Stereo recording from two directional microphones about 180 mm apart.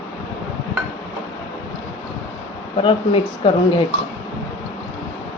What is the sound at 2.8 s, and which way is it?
Speech, 30° left (ahead or behind).